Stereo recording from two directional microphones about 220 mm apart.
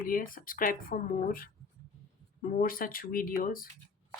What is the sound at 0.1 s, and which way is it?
Speech, 40° left (ahead or behind).